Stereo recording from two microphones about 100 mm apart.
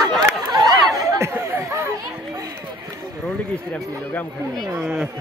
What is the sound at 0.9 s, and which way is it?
Chatter, 30° right (ahead or behind).